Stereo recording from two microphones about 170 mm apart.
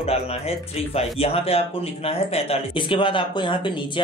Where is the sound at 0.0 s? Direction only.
35° left (ahead or behind).